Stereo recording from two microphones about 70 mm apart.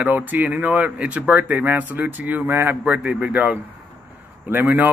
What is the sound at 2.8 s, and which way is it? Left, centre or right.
Speech, centre.